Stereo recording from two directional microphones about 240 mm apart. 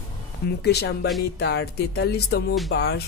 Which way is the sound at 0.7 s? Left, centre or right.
Left.